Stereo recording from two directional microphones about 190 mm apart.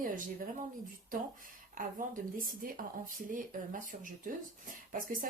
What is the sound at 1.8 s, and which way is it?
Speech, 45° right (ahead or behind).